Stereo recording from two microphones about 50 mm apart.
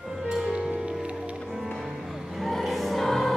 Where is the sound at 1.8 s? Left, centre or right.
Centre.